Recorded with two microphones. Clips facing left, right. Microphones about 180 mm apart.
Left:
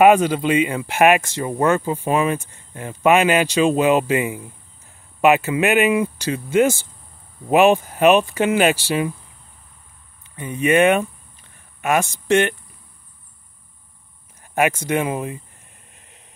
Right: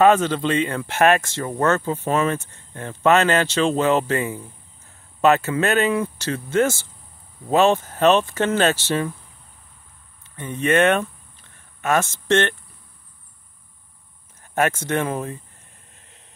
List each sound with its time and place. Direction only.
0.0 s speech: 10° left (ahead or behind)
10.3 s speech: 10° left (ahead or behind)
14.4 s speech: 10° left (ahead or behind)